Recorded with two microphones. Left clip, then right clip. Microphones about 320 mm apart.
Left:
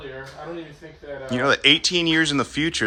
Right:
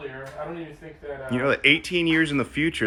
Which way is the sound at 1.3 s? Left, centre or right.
Centre.